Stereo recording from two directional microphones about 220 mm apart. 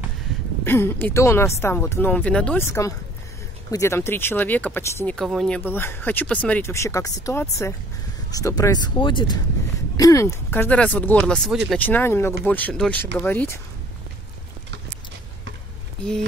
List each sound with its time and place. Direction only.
0.7 s speech: 10° left (ahead or behind)